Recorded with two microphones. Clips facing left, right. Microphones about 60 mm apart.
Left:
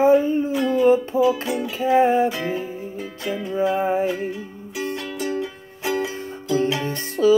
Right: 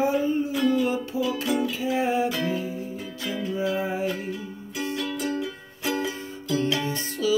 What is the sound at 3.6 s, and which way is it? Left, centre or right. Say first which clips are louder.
Music: left 8 dB; left.